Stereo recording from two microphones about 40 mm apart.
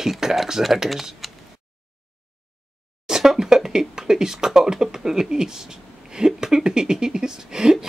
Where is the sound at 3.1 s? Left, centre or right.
Centre.